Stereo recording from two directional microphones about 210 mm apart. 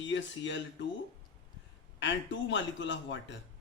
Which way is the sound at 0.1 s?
60° left (ahead or behind).